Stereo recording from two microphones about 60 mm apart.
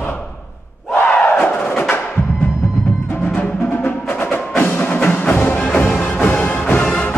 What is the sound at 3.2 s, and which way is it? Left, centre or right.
Music, left.